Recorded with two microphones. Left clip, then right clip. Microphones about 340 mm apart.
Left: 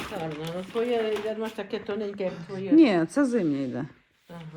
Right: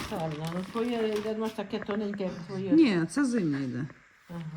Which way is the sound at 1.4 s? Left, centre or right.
Right.